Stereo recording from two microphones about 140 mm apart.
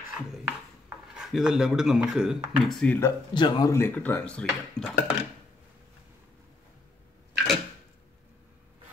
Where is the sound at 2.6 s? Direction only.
5° left (ahead or behind).